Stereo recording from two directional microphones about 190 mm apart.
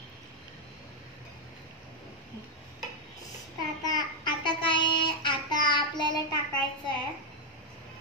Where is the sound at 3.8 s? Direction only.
25° left (ahead or behind).